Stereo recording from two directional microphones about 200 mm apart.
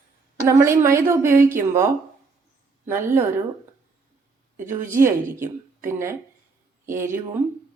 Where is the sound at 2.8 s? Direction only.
10° right (ahead or behind).